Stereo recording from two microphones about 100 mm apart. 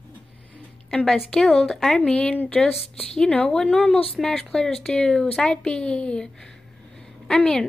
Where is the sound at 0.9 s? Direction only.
5° left (ahead or behind).